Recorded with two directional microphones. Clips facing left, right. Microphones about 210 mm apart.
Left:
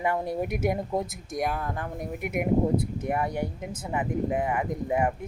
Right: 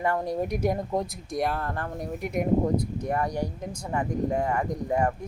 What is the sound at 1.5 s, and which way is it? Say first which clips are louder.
A woman's voice: right 1 dB; 15° left (ahead or behind).